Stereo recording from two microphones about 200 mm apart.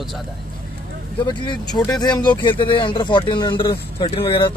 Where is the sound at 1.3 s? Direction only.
20° left (ahead or behind).